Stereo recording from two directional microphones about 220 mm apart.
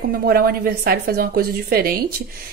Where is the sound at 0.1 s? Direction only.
45° right (ahead or behind).